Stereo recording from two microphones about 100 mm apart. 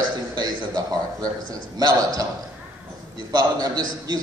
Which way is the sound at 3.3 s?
40° right (ahead or behind).